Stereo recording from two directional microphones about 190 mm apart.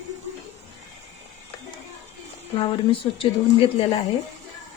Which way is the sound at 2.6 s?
25° left (ahead or behind).